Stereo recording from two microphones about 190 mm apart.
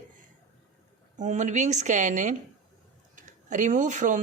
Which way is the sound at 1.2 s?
40° right (ahead or behind).